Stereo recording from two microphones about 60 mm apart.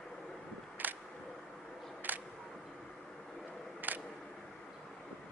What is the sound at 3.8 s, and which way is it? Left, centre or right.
Single-lens reflex camera, right.